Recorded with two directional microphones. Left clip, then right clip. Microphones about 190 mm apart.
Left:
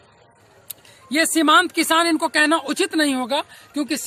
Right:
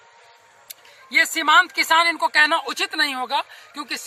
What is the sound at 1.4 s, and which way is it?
Speech, 35° left (ahead or behind).